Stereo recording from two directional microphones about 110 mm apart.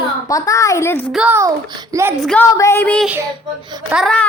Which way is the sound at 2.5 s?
30° left (ahead or behind).